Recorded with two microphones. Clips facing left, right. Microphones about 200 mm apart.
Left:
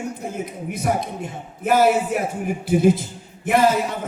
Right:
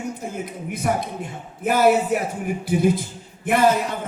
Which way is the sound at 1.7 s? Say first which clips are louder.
Even; 55° right (ahead or behind).